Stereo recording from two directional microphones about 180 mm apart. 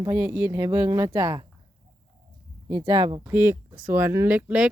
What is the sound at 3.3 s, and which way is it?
A woman's voice, 15° right (ahead or behind).